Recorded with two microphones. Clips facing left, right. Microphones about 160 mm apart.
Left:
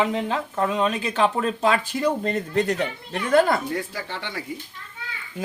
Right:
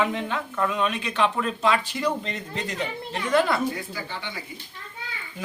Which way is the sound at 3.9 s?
75° left (ahead or behind).